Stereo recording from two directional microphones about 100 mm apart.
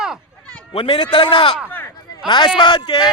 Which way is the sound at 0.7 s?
65° left (ahead or behind).